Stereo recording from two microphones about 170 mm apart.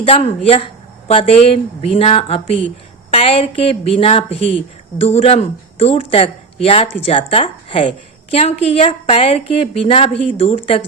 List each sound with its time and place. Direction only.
0.0 s speech: 35° left (ahead or behind)